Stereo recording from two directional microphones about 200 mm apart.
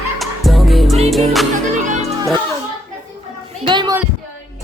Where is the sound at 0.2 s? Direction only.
Centre (ahead or behind).